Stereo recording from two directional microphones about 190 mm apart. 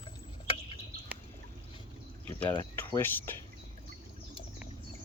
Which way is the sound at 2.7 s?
10° left (ahead or behind).